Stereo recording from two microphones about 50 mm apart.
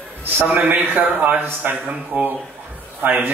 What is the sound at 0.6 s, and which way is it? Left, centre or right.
Speech, right.